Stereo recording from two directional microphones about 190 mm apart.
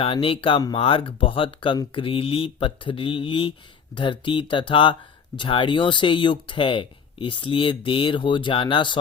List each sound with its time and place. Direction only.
0.0 s speech: 30° left (ahead or behind)